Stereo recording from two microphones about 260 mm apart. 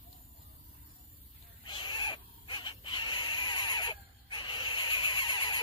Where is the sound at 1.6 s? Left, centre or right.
Centre.